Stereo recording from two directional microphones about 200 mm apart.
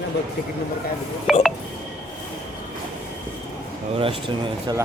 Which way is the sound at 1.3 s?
Centre (ahead or behind).